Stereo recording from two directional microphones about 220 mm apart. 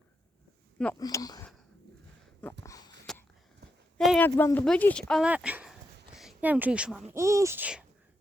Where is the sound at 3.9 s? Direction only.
5° left (ahead or behind).